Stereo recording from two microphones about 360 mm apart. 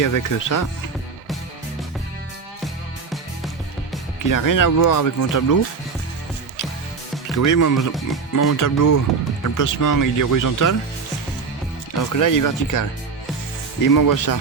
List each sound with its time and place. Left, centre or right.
0.0 s speech: left
4.2 s speech: left
7.3 s speech: left
7.8 s speech: centre
8.4 s speech: left
11.9 s speech: left
13.9 s speech: left